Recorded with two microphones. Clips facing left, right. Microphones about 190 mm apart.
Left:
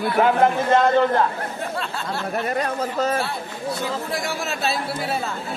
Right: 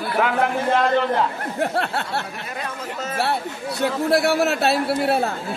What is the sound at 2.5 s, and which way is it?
Speech, 40° left (ahead or behind).